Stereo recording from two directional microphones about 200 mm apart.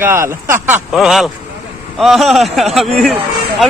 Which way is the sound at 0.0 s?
15° right (ahead or behind).